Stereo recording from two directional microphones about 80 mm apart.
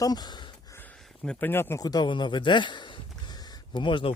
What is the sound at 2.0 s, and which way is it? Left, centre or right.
Speech, left.